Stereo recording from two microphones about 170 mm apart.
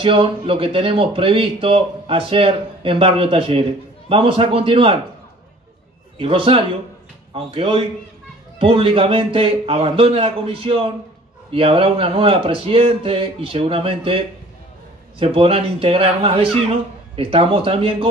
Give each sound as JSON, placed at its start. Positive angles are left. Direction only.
{"t": 0.0, "sound": "speech", "side_deg": -30}
{"t": 6.1, "sound": "speech", "side_deg": -30}